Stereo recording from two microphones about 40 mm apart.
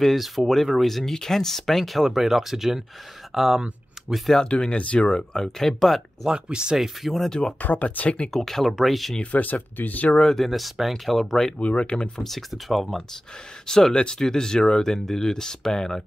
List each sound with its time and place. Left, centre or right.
0.0 s speech: centre
4.4 s speech: left
5.3 s speech: centre
6.3 s speech: right
6.8 s speech: centre
7.2 s speech: centre
7.6 s speech: left
8.3 s speech: centre
9.2 s speech: left
10.3 s speech: centre
11.5 s speech: left
12.2 s speech: centre